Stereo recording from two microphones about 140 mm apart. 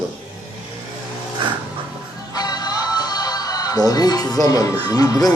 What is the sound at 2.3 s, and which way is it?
Music, 30° left (ahead or behind).